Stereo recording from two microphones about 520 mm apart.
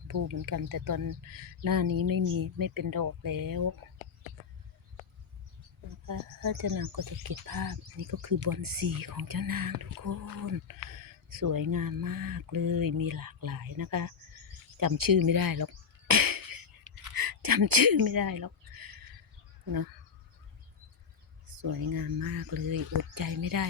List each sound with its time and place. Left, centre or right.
0.1 s speech: right
6.1 s speech: right
14.8 s a sound: right
21.4 s speech: right